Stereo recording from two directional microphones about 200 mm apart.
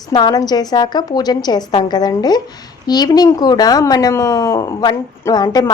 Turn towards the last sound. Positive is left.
turn(degrees=20)  # may be behind; listen again after turning